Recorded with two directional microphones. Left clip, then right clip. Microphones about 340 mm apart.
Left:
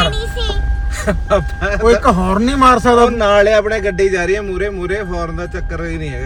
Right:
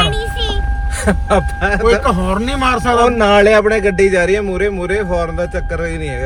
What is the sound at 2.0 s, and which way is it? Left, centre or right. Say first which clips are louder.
Speech: left 2 dB; centre.